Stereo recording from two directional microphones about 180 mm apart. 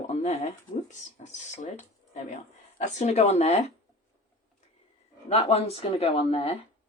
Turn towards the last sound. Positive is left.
turn(degrees=35)  # may be behind; listen again after turning